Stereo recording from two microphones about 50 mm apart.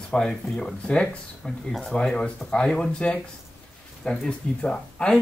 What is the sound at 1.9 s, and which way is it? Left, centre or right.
Speech, centre.